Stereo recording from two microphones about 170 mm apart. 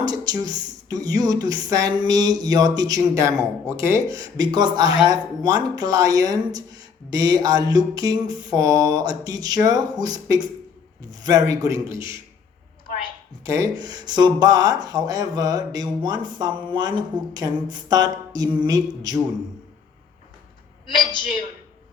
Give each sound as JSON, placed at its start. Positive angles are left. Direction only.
{"t": 0.0, "sound": "speech", "side_deg": -25}
{"t": 13.4, "sound": "speech", "side_deg": -20}